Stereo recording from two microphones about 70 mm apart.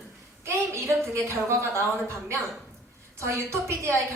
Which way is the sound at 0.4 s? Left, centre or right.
Right.